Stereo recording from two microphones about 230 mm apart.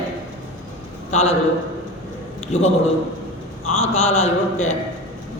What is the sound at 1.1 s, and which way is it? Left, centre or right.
Speech, left.